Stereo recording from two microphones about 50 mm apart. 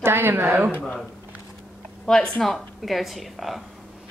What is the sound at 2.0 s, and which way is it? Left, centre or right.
Speech, centre.